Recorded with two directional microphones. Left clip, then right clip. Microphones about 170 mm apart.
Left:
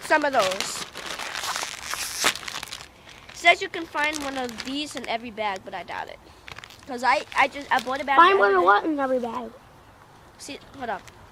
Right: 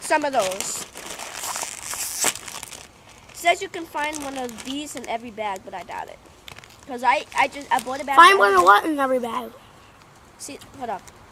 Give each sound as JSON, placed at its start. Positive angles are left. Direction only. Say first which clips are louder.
{"t": 0.0, "sound": "speech", "louder": "even", "side_deg": -5}
{"t": 0.3, "sound": "crumpling", "louder": "even", "side_deg": 5}
{"t": 3.3, "sound": "speech", "louder": "left 2 dB", "side_deg": 0}
{"t": 6.4, "sound": "a sound", "louder": "left 2 dB", "side_deg": -5}
{"t": 6.9, "sound": "speech", "louder": "right 1 dB", "side_deg": 5}
{"t": 8.2, "sound": "a woman's voice", "louder": "right 5 dB", "side_deg": -15}
{"t": 10.4, "sound": "speech", "louder": "right 1 dB", "side_deg": 0}